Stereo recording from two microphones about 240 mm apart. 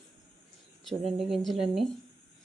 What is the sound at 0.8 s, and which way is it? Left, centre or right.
Speech, centre.